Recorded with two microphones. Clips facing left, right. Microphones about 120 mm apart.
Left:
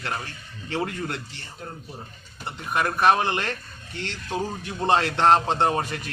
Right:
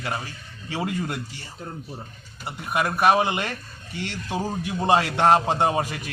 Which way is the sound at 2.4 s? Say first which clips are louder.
Right 1 dB; 10° right (ahead or behind).